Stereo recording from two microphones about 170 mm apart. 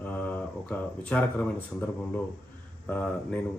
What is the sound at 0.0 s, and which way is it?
Speech, 10° left (ahead or behind).